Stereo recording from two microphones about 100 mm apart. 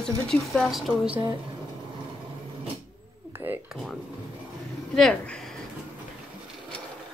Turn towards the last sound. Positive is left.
turn(degrees=10)  # may be behind; listen again after turning